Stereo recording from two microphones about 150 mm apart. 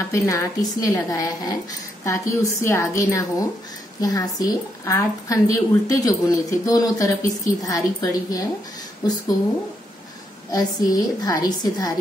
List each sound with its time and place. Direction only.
0.1 s a woman's voice: 20° left (ahead or behind)
10.5 s a woman's voice: 25° left (ahead or behind)